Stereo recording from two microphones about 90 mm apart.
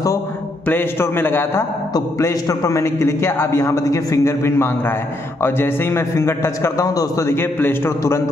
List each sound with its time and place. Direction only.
0.7 s a man's voice: 25° left (ahead or behind)
2.0 s a man's voice: 35° left (ahead or behind)